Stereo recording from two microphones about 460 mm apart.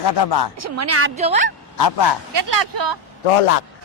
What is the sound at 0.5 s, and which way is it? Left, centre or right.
Speech, right.